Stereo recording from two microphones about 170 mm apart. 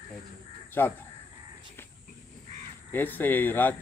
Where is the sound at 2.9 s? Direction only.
10° left (ahead or behind).